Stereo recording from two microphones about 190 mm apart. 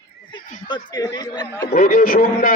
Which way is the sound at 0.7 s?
20° left (ahead or behind).